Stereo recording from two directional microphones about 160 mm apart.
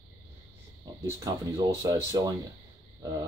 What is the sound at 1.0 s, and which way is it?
Speech, 20° right (ahead or behind).